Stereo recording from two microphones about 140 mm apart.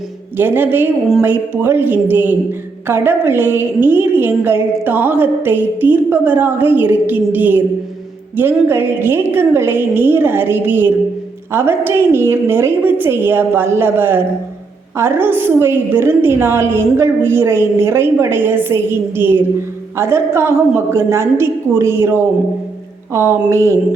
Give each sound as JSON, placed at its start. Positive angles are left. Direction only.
{"t": 0.3, "sound": "a woman's voice", "side_deg": -15}